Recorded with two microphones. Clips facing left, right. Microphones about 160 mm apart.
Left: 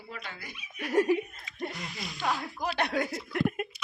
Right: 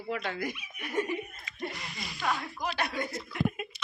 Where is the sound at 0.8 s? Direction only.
85° left.